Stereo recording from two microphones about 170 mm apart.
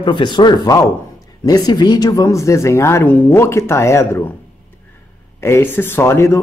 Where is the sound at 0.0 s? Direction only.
25° left (ahead or behind).